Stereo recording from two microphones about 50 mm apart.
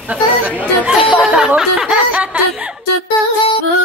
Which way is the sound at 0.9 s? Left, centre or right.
Centre.